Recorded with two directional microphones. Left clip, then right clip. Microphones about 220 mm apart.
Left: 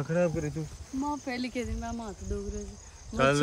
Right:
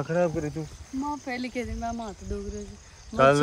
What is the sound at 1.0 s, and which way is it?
Speech, 20° left (ahead or behind).